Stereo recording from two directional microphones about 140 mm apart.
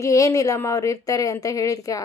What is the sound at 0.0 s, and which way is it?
Speech, 25° left (ahead or behind).